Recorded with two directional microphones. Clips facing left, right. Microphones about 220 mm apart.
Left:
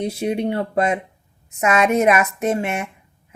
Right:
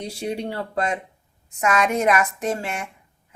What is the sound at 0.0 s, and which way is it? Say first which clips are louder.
Speech: left 6 dB; 20° left (ahead or behind).